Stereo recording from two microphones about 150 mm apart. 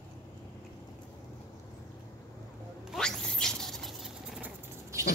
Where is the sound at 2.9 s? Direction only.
5° left (ahead or behind).